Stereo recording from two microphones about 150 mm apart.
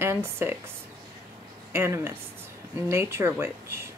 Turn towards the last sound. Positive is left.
turn(degrees=-15)  # may be behind; listen again after turning